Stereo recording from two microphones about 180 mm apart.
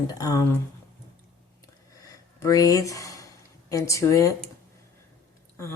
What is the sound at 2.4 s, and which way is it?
Speech, 20° left (ahead or behind).